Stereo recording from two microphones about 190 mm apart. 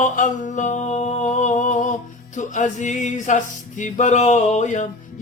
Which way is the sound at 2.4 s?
40° left (ahead or behind).